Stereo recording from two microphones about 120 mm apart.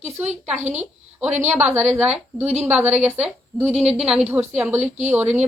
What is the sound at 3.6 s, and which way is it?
Speech, 60° right (ahead or behind).